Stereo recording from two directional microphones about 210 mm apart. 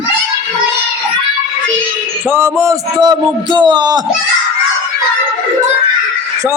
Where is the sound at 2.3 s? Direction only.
10° right (ahead or behind).